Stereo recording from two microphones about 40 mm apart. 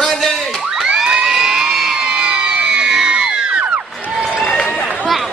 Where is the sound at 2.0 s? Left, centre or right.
Right.